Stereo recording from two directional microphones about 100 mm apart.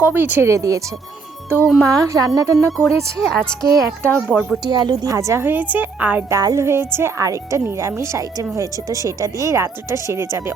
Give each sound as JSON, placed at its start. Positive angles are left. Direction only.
{"t": 0.0, "sound": "a woman's voice", "side_deg": -20}
{"t": 0.5, "sound": "speech", "side_deg": -35}
{"t": 1.6, "sound": "speech", "side_deg": 0}
{"t": 1.9, "sound": "speech", "side_deg": -35}
{"t": 2.7, "sound": "speech", "side_deg": 5}
{"t": 3.7, "sound": "a woman's voice", "side_deg": -25}
{"t": 4.6, "sound": "a woman's voice", "side_deg": -40}
{"t": 6.3, "sound": "a woman's voice", "side_deg": -30}